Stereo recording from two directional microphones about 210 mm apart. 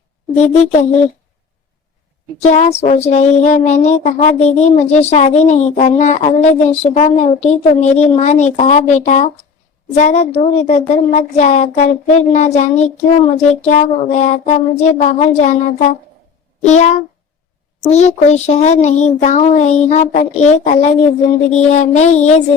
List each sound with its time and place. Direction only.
0.3 s speech: 30° left (ahead or behind)
2.4 s speech: 30° left (ahead or behind)